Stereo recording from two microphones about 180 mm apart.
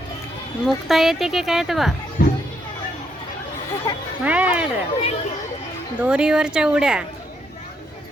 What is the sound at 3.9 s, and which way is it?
Music, 20° left (ahead or behind).